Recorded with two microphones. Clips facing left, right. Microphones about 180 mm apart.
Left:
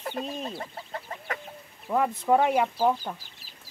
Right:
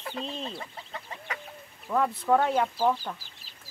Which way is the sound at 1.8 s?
10° left (ahead or behind).